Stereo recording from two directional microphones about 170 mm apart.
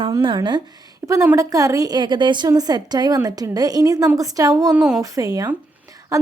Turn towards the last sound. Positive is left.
turn(degrees=-20)  # may be behind; listen again after turning